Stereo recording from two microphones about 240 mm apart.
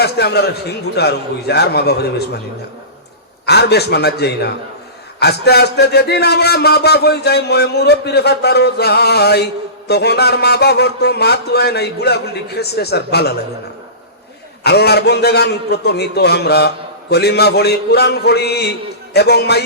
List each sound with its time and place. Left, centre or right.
0.0 s a man's voice: left
3.4 s a man's voice: left
14.6 s a man's voice: left